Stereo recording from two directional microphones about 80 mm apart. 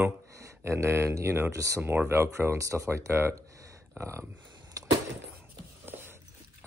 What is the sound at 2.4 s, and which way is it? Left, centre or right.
Speech, right.